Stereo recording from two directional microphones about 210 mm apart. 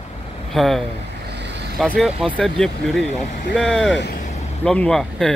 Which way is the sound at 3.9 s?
55° left (ahead or behind).